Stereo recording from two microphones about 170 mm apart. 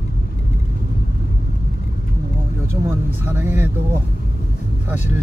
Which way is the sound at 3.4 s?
15° right (ahead or behind).